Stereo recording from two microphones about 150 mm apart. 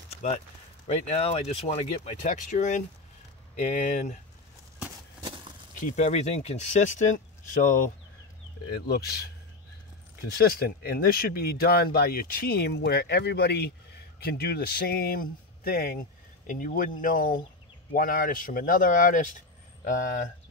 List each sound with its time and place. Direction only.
0.8 s speech: 45° left (ahead or behind)
2.2 s speech: 55° left (ahead or behind)
5.8 s speech: 50° left (ahead or behind)
7.6 s speech: 65° left (ahead or behind)
8.6 s speech: 90° left
10.3 s speech: 90° left
16.4 s speech: 65° left (ahead or behind)